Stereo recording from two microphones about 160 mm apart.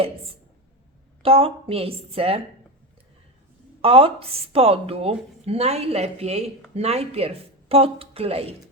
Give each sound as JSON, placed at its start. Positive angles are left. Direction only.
{"t": 1.2, "sound": "a woman's voice", "side_deg": -35}
{"t": 3.8, "sound": "a woman's voice", "side_deg": -35}